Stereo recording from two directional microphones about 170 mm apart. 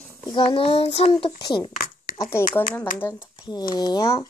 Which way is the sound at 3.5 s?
25° left (ahead or behind).